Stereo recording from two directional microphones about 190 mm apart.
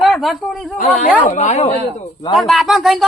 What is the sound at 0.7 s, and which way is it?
Speech, 40° left (ahead or behind).